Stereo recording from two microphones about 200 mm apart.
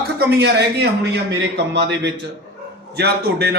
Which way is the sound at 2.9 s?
55° right (ahead or behind).